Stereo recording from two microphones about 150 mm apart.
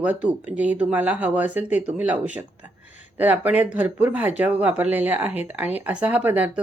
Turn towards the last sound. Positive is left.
turn(degrees=-10)  # may be behind; listen again after turning